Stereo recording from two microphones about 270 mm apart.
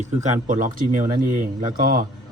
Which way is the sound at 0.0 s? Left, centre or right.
Right.